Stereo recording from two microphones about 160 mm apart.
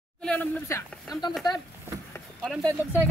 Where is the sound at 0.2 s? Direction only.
5° left (ahead or behind).